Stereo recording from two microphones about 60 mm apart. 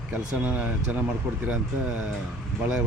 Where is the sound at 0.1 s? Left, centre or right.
Centre.